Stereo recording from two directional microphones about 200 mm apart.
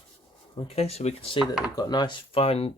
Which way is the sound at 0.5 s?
30° left (ahead or behind).